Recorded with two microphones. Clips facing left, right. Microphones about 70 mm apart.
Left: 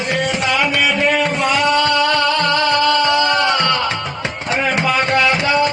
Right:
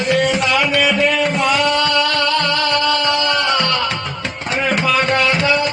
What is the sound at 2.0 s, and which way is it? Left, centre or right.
Music, centre.